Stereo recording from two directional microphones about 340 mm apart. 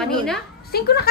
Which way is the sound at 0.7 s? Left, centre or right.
Left.